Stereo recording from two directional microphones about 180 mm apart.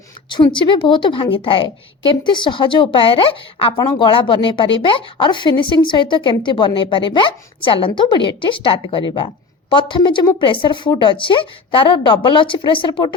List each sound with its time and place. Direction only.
0.3 s speech: 25° left (ahead or behind)